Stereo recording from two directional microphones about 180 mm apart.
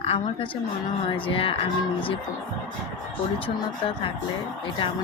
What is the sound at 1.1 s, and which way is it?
Speech, 30° left (ahead or behind).